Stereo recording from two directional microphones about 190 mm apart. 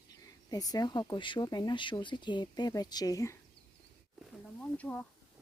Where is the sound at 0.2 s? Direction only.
20° left (ahead or behind).